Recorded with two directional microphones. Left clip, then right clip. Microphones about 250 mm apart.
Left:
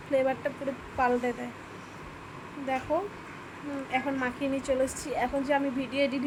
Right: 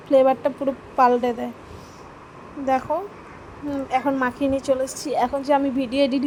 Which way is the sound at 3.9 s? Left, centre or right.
Right.